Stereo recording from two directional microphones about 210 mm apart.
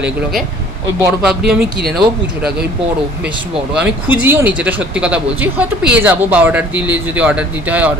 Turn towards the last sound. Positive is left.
turn(degrees=-5)  # may be behind; listen again after turning